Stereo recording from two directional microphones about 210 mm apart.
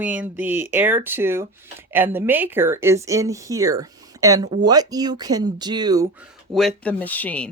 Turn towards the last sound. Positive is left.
turn(degrees=5)  # may be behind; listen again after turning